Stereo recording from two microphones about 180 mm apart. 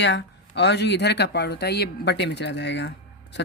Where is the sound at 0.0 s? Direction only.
75° left (ahead or behind).